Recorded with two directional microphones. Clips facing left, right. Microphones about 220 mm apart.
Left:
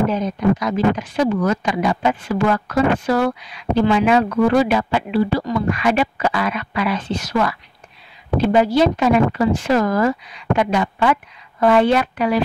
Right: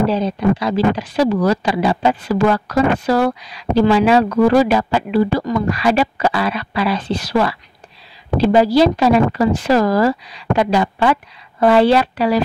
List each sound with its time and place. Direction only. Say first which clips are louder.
0.0 s speech: right 2 dB; 30° right (ahead or behind)